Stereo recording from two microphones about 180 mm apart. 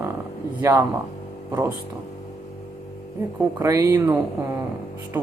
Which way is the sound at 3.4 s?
15° right (ahead or behind).